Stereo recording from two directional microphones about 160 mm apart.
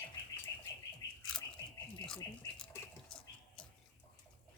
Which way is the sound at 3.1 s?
5° left (ahead or behind).